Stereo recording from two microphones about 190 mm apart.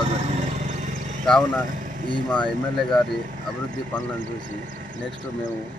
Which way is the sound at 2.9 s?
Centre (ahead or behind).